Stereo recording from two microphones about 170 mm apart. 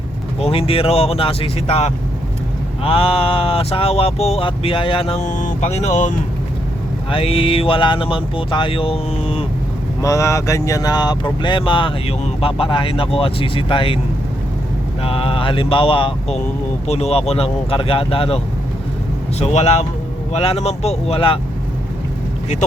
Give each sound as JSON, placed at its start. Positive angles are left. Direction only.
{"t": 0.3, "sound": "speech", "side_deg": 35}
{"t": 5.2, "sound": "speech", "side_deg": 45}
{"t": 7.1, "sound": "speech", "side_deg": 30}
{"t": 10.0, "sound": "speech", "side_deg": 20}
{"t": 15.0, "sound": "speech", "side_deg": 35}
{"t": 19.4, "sound": "speech", "side_deg": 40}